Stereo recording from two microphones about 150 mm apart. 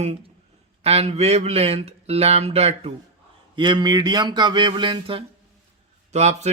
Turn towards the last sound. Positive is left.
turn(degrees=-50)  # may be behind; listen again after turning